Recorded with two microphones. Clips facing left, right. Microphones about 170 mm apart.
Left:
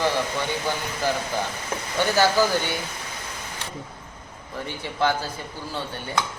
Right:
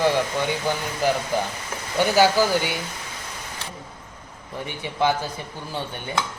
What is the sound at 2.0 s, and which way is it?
Speech, 15° right (ahead or behind).